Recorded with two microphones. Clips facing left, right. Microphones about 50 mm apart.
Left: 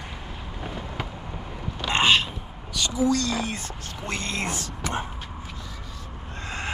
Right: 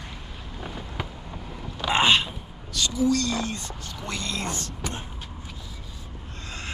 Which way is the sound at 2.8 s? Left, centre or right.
Centre.